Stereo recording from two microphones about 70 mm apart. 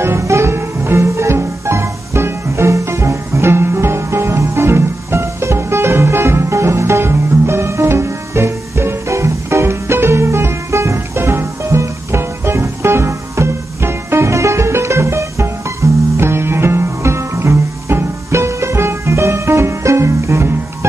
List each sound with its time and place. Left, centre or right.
0.0 s music: right